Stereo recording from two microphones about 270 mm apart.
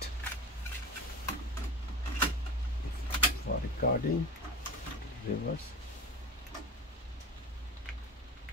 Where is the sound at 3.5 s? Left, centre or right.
Left.